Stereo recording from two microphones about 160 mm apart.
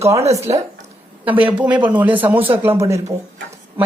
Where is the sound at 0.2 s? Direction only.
40° right (ahead or behind).